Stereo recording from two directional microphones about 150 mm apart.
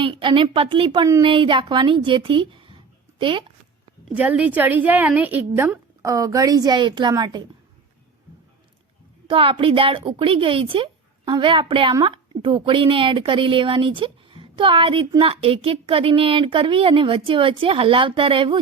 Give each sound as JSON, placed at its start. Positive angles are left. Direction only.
{"t": 0.0, "sound": "a woman's voice", "side_deg": -35}
{"t": 4.1, "sound": "a woman's voice", "side_deg": -10}
{"t": 9.3, "sound": "a woman's voice", "side_deg": -35}